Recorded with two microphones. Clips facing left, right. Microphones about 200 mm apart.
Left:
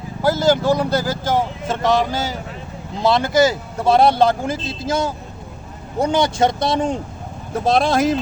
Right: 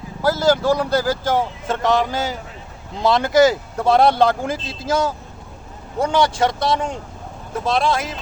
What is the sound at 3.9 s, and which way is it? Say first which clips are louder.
Speech: left 1 dB; 15° left (ahead or behind).